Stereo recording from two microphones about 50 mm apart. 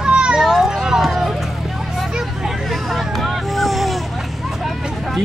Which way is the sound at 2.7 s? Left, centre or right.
Centre.